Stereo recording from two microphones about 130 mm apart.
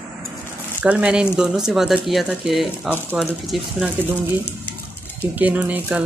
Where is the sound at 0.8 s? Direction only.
10° right (ahead or behind).